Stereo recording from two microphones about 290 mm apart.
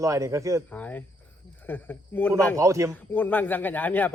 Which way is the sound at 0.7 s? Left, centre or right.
Centre.